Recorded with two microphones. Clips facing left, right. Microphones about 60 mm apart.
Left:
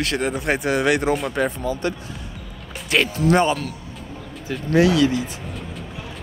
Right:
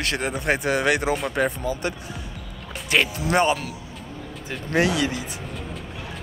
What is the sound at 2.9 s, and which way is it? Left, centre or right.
Speech, centre.